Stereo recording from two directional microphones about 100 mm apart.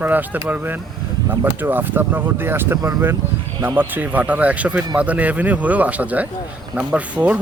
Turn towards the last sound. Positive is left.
turn(degrees=-15)  # may be behind; listen again after turning